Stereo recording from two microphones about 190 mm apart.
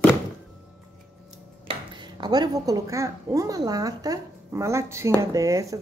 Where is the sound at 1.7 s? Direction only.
25° right (ahead or behind).